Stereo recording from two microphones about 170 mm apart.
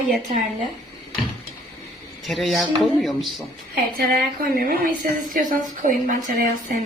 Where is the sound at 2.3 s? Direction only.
Centre (ahead or behind).